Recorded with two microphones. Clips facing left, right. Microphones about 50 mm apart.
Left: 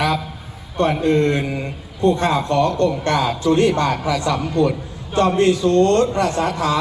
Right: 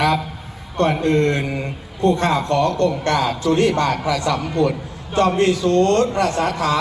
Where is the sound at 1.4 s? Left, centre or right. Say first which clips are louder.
Even; centre.